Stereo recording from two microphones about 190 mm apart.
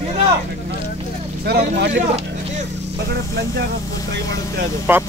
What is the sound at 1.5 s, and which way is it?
Speech, 60° right (ahead or behind).